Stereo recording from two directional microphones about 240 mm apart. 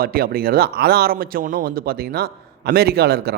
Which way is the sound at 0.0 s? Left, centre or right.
Right.